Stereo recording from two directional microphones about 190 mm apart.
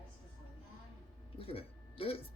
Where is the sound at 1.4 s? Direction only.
30° left (ahead or behind).